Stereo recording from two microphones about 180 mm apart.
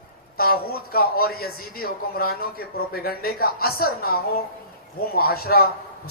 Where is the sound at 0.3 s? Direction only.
55° left (ahead or behind).